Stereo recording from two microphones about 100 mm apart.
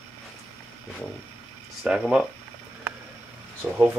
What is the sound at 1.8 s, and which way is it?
Speech, 10° right (ahead or behind).